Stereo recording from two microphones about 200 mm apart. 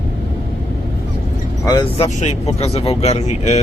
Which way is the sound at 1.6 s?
15° left (ahead or behind).